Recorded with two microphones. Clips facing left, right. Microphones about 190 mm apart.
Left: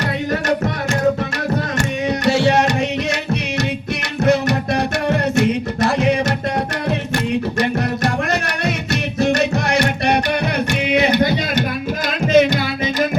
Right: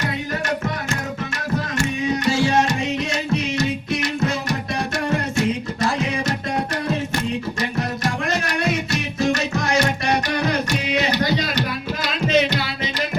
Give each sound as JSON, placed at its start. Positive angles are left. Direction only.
{"t": 1.8, "sound": "music", "side_deg": 65}
{"t": 4.2, "sound": "music", "side_deg": 65}
{"t": 7.6, "sound": "music", "side_deg": 60}